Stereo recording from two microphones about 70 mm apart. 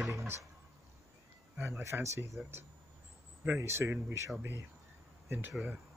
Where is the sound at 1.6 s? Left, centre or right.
Right.